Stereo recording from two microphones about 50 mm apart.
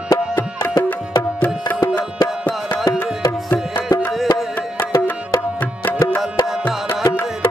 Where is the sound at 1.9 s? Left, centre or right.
Left.